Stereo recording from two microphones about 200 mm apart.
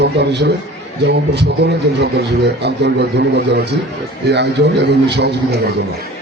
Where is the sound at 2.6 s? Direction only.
55° right (ahead or behind).